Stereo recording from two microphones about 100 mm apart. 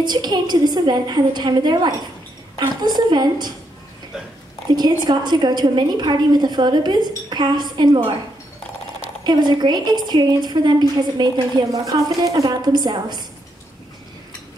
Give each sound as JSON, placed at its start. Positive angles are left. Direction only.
{"t": 0.0, "sound": "a woman's voice", "side_deg": -45}
{"t": 4.7, "sound": "a woman's voice", "side_deg": -45}
{"t": 9.2, "sound": "a woman's voice", "side_deg": -45}